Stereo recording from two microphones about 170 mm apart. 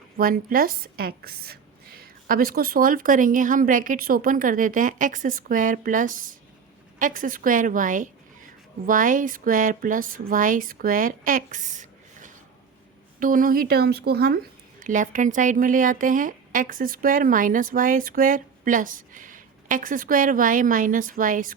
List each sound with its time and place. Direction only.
0.2 s speech: 55° right (ahead or behind)
14.8 s speech: 50° right (ahead or behind)